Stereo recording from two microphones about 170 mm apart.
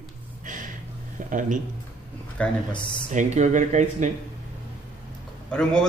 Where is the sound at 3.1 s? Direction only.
45° right (ahead or behind).